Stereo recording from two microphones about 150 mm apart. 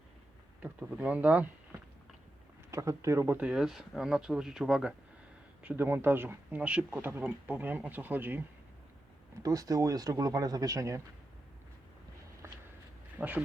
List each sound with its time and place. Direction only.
0.6 s speech: 10° right (ahead or behind)
2.6 s speech: 20° right (ahead or behind)
9.4 s speech: 25° right (ahead or behind)
13.1 s speech: 10° right (ahead or behind)